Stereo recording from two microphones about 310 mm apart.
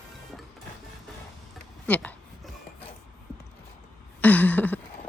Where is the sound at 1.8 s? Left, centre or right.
Centre.